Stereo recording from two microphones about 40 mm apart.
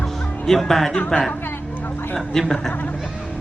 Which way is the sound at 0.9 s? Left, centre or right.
Left.